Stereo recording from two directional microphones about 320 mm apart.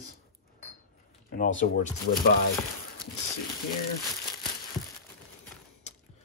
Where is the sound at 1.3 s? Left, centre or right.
Left.